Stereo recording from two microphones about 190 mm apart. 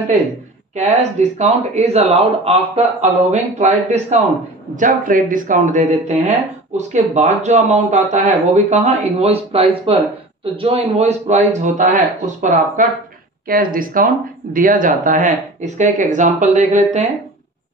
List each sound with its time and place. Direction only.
0.7 s a man's voice: 35° right (ahead or behind)